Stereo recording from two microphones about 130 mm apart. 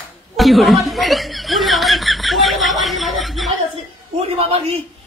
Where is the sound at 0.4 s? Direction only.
Centre (ahead or behind).